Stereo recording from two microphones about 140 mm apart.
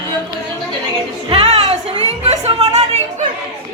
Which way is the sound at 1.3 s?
50° right (ahead or behind).